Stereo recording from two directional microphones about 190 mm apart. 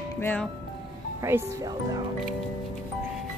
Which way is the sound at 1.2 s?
15° right (ahead or behind).